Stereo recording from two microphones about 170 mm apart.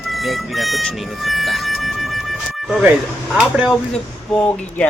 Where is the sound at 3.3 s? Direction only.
5° right (ahead or behind).